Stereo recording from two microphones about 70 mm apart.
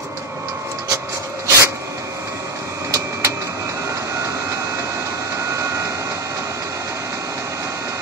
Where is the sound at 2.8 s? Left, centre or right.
Right.